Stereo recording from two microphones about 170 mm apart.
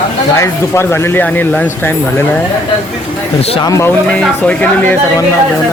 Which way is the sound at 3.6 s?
15° left (ahead or behind).